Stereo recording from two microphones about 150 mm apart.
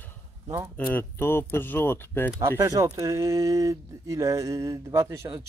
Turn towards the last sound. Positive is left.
turn(degrees=-20)  # may be behind; listen again after turning